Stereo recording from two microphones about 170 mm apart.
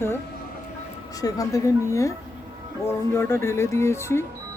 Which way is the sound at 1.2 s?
20° left (ahead or behind).